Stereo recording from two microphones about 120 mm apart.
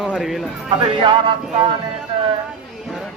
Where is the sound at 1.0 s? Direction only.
40° right (ahead or behind).